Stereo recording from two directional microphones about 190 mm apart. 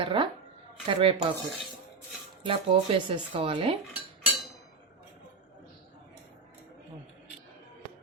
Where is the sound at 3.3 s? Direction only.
30° right (ahead or behind).